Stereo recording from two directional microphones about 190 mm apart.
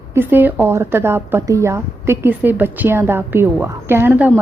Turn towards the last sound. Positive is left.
turn(degrees=-10)  # may be behind; listen again after turning